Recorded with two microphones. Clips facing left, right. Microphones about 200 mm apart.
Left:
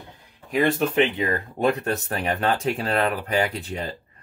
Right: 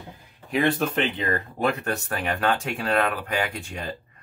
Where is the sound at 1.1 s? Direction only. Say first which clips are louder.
Left 2 dB; 15° left (ahead or behind); by 3.1 s 35° left (ahead or behind).